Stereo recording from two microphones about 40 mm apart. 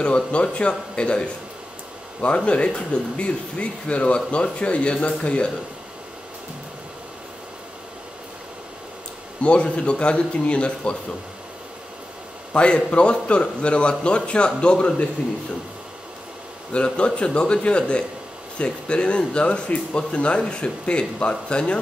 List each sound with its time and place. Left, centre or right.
0.0 s speech: left
9.4 s speech: left
12.5 s speech: left
16.7 s speech: left